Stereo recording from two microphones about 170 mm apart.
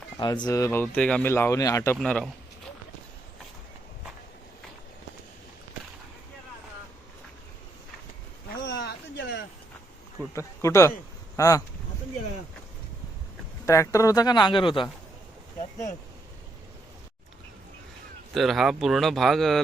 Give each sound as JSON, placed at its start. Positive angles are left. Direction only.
{"t": 0.2, "sound": "speech", "side_deg": 25}
{"t": 2.0, "sound": "speech", "side_deg": 5}
{"t": 8.6, "sound": "a sound", "side_deg": 90}
{"t": 10.3, "sound": "speech", "side_deg": 15}
{"t": 13.7, "sound": "speech", "side_deg": 20}
{"t": 18.3, "sound": "speech", "side_deg": 0}